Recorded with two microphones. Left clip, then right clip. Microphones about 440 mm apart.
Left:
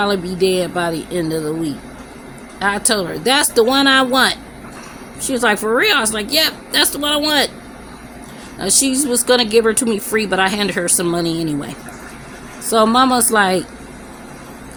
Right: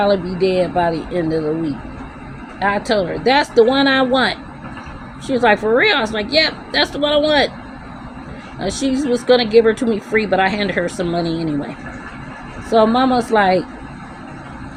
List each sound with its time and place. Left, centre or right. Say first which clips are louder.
0.0 s speech: right 1 dB; left
2.6 s speech: right 1 dB; left
8.6 s speech: left 2 dB; left
12.7 s speech: left 1 dB; left